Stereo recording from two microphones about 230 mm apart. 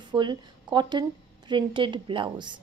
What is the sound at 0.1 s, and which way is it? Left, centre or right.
A woman's voice, centre.